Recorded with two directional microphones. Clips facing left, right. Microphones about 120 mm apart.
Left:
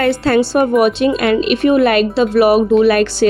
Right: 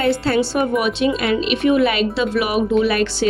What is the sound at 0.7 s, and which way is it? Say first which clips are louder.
Speech: left 6 dB; 45° left (ahead or behind).